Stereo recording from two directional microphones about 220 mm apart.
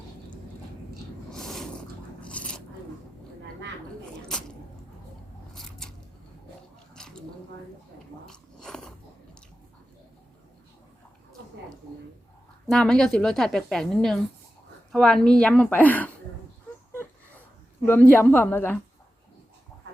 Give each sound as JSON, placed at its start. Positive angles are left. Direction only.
{"t": 1.3, "sound": "a sound", "side_deg": 0}
{"t": 2.2, "sound": "zipper", "side_deg": 5}
{"t": 5.5, "sound": "scissors", "side_deg": 0}
{"t": 6.9, "sound": "a sound", "side_deg": 5}
{"t": 8.3, "sound": "biting", "side_deg": 5}
{"t": 12.6, "sound": "a woman's voice", "side_deg": 5}
{"t": 17.8, "sound": "a woman's voice", "side_deg": 10}